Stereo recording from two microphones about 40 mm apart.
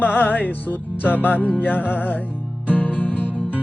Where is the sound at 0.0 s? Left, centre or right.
Left.